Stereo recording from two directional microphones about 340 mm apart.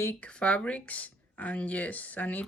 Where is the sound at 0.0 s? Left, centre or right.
Centre.